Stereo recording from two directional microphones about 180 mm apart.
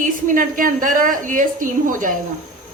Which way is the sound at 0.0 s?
50° right (ahead or behind).